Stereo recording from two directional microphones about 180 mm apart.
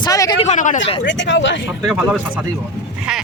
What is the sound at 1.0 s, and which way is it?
Speech, 85° left.